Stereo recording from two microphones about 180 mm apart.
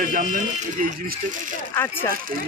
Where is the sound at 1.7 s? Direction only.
15° left (ahead or behind).